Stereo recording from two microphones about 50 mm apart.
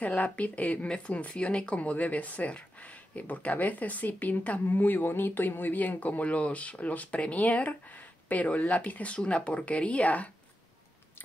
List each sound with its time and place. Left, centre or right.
0.0 s speech: left